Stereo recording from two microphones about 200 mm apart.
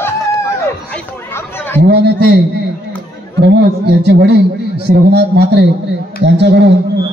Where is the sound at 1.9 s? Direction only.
55° right (ahead or behind).